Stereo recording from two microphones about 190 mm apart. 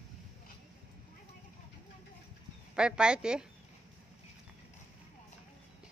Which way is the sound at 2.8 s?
5° right (ahead or behind).